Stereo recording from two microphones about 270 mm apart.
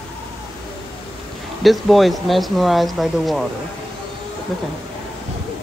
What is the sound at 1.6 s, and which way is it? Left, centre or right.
A child's voice, centre.